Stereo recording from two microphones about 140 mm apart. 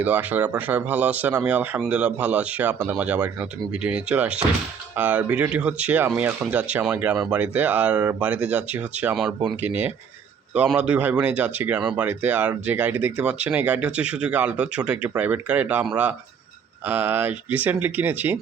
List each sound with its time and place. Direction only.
0.0 s speech: 10° right (ahead or behind)